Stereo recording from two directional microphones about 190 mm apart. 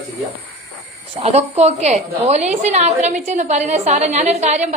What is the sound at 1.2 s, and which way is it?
A woman's voice, 35° right (ahead or behind).